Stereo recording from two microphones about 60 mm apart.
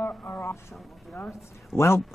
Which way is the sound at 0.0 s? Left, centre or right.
Left.